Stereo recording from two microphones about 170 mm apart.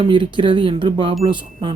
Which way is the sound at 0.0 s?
30° right (ahead or behind).